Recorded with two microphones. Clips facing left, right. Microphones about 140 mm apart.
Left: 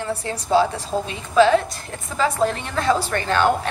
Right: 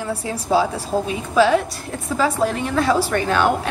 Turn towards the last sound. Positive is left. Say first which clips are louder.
# right 2 dB
turn(degrees=-5)  # may be behind; listen again after turning